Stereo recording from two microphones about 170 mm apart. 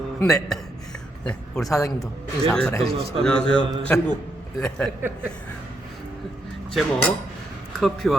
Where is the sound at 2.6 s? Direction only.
5° left (ahead or behind).